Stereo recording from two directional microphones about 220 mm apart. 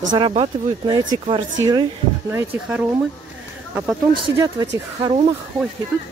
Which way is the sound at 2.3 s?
10° right (ahead or behind).